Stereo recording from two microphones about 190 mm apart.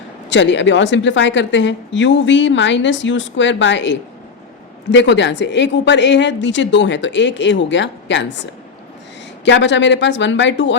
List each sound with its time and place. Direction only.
0.3 s a woman's voice: 70° left (ahead or behind)